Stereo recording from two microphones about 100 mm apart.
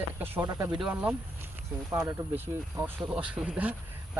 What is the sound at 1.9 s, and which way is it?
Speech, 25° right (ahead or behind).